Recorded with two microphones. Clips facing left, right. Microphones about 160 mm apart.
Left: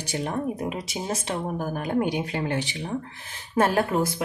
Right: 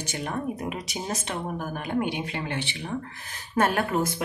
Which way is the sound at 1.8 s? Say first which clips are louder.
Left 3 dB; 40° left (ahead or behind).